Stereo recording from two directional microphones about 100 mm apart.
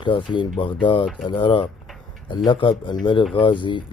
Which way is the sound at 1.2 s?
55° left (ahead or behind).